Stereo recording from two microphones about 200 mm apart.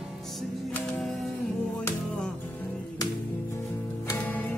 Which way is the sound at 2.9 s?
15° left (ahead or behind).